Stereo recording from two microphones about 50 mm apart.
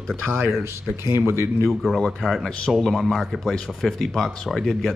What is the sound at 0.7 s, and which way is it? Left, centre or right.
Speech, right.